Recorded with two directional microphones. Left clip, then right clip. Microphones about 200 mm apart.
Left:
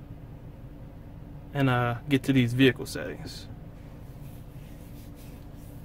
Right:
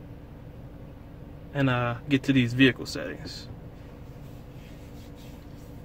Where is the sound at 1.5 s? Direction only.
20° left (ahead or behind).